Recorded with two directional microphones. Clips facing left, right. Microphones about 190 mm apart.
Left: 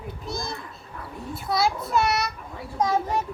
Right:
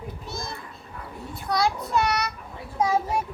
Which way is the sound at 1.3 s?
5° left (ahead or behind).